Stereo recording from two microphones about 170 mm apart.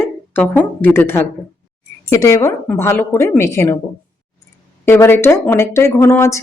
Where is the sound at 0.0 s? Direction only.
10° left (ahead or behind).